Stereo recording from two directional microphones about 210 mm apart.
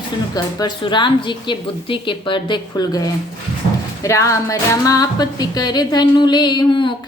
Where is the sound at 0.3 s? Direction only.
20° left (ahead or behind).